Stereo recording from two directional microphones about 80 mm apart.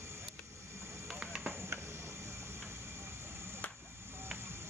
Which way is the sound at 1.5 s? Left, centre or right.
Right.